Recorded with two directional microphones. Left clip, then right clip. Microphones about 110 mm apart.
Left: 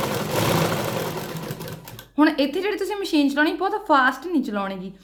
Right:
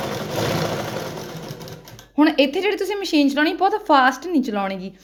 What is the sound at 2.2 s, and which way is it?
A woman's voice, 35° right (ahead or behind).